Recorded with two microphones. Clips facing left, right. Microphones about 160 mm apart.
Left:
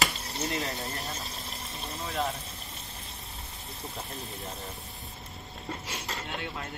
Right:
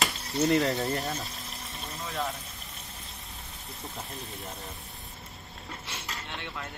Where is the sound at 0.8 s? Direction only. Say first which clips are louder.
Right 7 dB; 40° right (ahead or behind).